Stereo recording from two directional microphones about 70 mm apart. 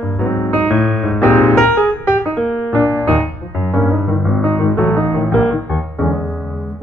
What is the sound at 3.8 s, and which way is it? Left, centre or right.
Music, right.